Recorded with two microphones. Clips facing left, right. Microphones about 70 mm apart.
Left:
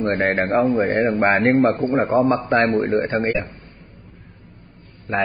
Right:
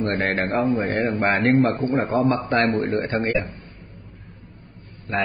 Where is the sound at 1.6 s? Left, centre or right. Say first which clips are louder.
Left 3 dB; left.